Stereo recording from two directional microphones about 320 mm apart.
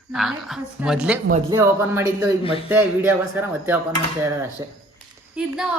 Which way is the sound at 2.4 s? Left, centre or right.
Centre.